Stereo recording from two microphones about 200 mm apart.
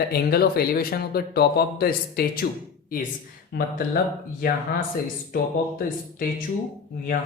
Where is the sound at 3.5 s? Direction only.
55° left (ahead or behind).